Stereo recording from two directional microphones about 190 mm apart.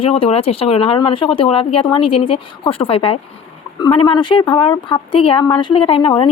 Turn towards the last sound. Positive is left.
turn(degrees=25)  # may be behind; listen again after turning